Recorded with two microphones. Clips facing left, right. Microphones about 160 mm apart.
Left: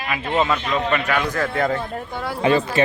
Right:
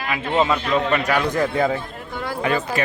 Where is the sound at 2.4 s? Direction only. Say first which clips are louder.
Left 5 dB; 25° left (ahead or behind).